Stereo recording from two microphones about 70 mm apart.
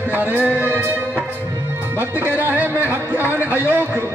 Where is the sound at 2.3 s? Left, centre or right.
Right.